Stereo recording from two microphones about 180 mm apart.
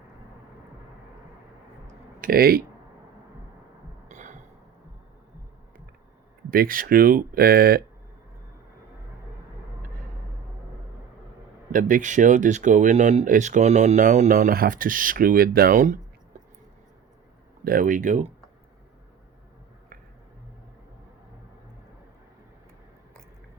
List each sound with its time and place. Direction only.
2.2 s speech: 55° right (ahead or behind)
4.1 s a sound: 40° right (ahead or behind)
6.5 s speech: 50° right (ahead or behind)
11.7 s speech: 45° right (ahead or behind)
17.6 s speech: 55° right (ahead or behind)